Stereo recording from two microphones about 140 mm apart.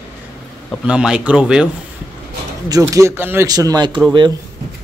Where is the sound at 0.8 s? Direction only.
5° right (ahead or behind).